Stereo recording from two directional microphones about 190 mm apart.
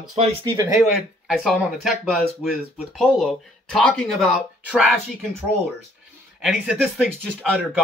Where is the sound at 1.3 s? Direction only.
Centre (ahead or behind).